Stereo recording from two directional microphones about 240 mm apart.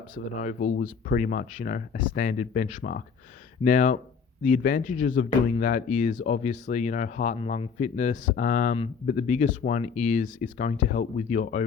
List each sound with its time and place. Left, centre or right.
0.1 s speech: left